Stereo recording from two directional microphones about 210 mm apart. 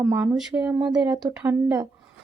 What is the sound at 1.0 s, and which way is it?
Speech, 20° right (ahead or behind).